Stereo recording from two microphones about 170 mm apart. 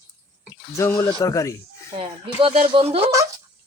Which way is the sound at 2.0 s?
30° right (ahead or behind).